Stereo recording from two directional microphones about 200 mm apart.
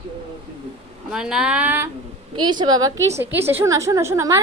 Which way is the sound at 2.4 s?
20° right (ahead or behind).